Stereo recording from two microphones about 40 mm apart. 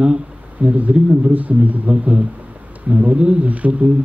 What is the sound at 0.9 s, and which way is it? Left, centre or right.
Speech, right.